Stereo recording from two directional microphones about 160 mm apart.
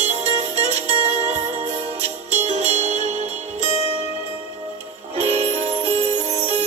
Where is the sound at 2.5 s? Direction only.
45° right (ahead or behind).